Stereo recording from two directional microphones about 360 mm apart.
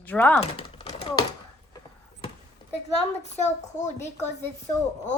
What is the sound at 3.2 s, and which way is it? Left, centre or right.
A woman's voice, centre.